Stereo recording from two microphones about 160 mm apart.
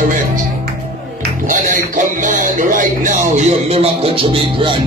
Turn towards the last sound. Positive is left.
turn(degrees=-30)  # may be behind; listen again after turning